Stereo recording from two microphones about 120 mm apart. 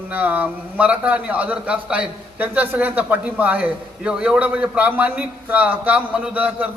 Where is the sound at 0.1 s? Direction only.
15° right (ahead or behind).